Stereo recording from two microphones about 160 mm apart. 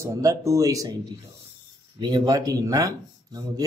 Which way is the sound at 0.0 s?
20° right (ahead or behind).